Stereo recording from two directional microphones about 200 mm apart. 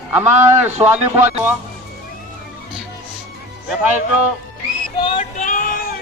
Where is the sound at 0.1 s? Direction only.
10° right (ahead or behind).